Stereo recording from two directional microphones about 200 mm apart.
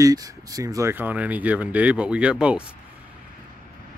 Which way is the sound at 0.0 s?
15° right (ahead or behind).